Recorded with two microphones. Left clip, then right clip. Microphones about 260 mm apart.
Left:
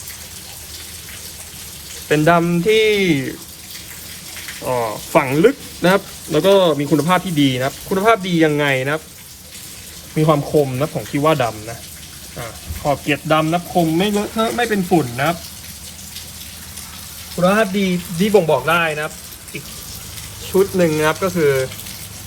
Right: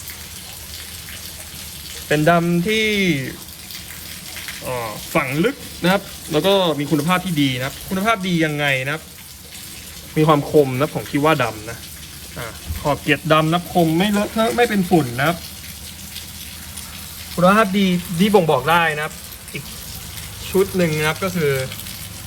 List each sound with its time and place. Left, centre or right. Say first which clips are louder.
2.0 s speech: left 2 dB; centre
4.7 s speech: left 6 dB; centre
8.0 s speech: left 5 dB; centre
10.2 s speech: right 1 dB; right; by 15.4 s centre
17.4 s speech: right 1 dB; centre
20.5 s speech: left 3 dB; centre